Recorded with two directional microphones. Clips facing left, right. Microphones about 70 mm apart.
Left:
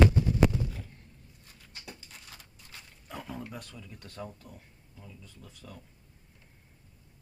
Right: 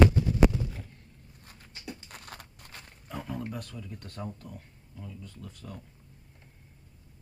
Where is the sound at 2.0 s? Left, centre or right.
Right.